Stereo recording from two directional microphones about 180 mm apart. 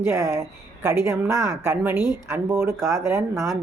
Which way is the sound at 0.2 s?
15° right (ahead or behind).